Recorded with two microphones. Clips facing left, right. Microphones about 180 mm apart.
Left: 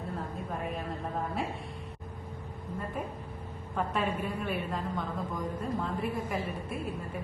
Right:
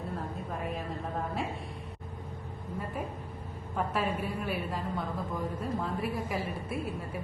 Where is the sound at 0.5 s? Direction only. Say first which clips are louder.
Left 1 dB; centre (ahead or behind).